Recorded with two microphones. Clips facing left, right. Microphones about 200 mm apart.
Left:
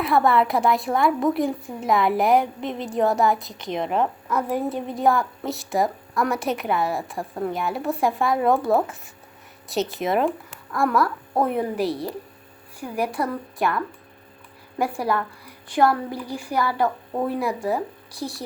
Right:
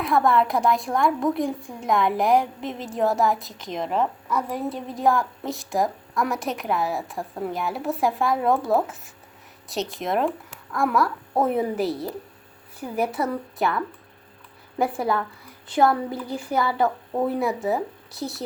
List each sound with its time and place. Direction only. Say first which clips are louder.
0.0 s a woman's voice: left 1 dB; centre (ahead or behind)
14.8 s a woman's voice: right 1 dB; 20° right (ahead or behind)
16.4 s a woman's voice: even; 25° right (ahead or behind)
16.8 s a woman's voice: right 1 dB; centre (ahead or behind)